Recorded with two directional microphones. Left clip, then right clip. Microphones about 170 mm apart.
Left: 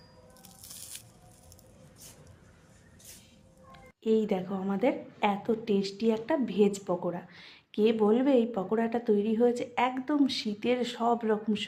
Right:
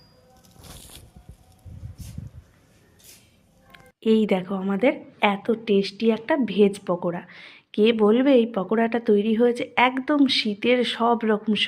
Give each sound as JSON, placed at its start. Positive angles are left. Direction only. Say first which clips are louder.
{"t": 3.7, "sound": "a woman's voice", "louder": "right 6 dB", "side_deg": -35}